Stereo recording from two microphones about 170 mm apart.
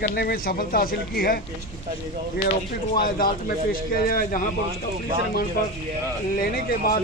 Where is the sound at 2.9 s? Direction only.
60° left (ahead or behind).